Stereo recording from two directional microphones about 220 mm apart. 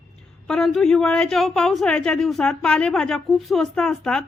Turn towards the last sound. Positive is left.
turn(degrees=0)  # may be behind; listen again after turning